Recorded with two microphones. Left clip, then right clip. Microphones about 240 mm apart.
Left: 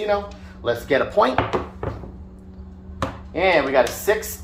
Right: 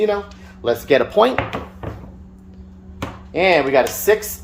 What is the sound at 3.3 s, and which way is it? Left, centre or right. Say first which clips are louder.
Speech: right 3 dB; right.